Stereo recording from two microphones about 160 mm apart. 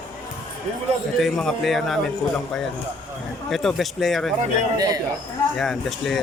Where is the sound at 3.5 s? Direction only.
Centre (ahead or behind).